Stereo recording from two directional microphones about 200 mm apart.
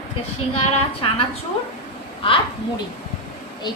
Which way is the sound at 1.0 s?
25° left (ahead or behind).